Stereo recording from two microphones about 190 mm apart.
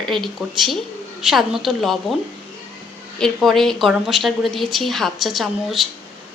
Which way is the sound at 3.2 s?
Centre (ahead or behind).